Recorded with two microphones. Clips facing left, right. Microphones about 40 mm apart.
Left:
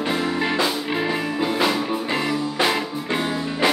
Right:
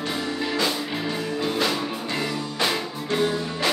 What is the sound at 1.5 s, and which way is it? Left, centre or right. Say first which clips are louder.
Music: left 3 dB; centre.